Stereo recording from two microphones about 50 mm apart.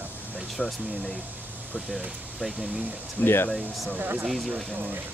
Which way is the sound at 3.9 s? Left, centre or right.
Right.